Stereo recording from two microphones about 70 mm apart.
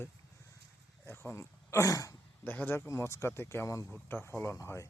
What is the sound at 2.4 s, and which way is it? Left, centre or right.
Speech, left.